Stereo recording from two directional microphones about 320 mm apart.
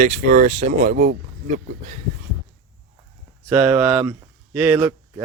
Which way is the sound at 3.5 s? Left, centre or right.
Centre.